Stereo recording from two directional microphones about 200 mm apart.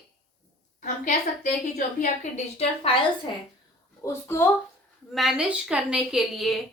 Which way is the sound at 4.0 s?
15° left (ahead or behind).